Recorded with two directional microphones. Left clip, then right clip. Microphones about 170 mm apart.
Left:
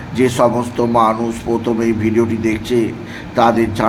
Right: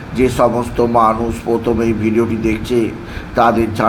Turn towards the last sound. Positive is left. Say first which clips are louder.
# even
turn(degrees=5)  # may be behind; listen again after turning